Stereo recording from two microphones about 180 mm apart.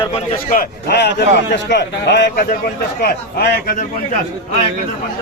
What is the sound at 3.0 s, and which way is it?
Speech, 55° left (ahead or behind).